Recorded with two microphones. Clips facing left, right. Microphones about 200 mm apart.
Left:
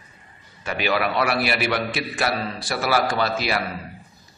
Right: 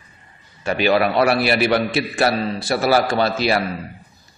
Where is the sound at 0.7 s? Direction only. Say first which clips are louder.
Right 6 dB; 30° right (ahead or behind).